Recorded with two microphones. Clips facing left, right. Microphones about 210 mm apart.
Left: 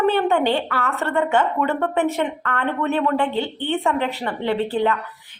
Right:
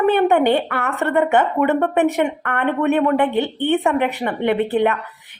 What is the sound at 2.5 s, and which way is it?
Speech, 60° right (ahead or behind).